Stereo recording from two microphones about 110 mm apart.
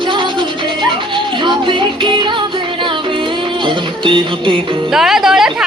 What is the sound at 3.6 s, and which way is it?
Music, 50° right (ahead or behind).